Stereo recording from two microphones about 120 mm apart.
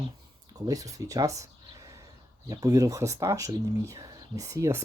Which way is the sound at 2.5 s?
30° right (ahead or behind).